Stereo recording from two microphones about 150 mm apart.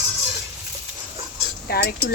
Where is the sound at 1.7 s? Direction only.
90° left.